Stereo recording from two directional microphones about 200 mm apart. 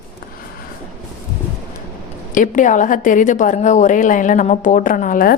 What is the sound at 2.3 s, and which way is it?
A woman's voice, 40° left (ahead or behind).